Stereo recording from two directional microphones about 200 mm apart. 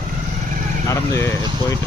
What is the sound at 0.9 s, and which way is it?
Speech, 15° left (ahead or behind).